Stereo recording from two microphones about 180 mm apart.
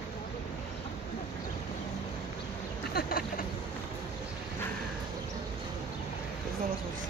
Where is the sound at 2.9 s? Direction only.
55° left (ahead or behind).